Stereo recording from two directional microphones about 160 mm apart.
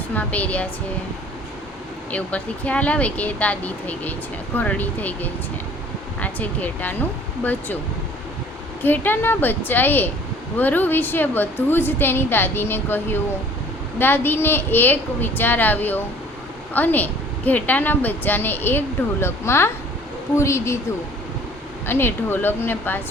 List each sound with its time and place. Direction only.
0.1 s a woman's voice: 10° left (ahead or behind)
2.0 s a woman's voice: 10° left (ahead or behind)
8.8 s a woman's voice: 10° left (ahead or behind)
21.8 s a woman's voice: 15° left (ahead or behind)